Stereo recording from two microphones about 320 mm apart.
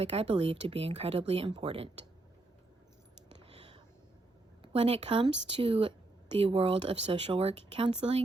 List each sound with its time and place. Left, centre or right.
0.0 s speech: centre
4.6 s speech: centre